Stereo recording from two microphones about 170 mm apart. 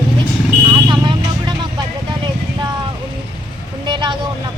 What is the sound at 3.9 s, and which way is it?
Speech, 25° right (ahead or behind).